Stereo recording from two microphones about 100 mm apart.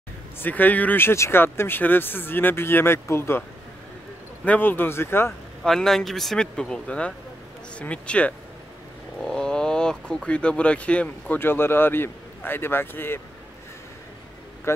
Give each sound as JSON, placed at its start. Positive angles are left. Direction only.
{"t": 0.4, "sound": "speech", "side_deg": 15}
{"t": 4.5, "sound": "speech", "side_deg": 20}
{"t": 5.6, "sound": "speech", "side_deg": 5}